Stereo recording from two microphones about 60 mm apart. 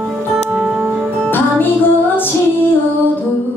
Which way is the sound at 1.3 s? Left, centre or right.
Left.